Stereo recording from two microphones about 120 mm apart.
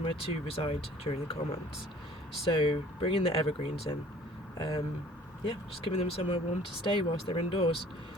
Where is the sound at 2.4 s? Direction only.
45° left (ahead or behind).